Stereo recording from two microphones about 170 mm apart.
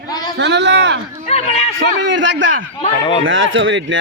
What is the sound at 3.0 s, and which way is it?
Speech, 30° left (ahead or behind).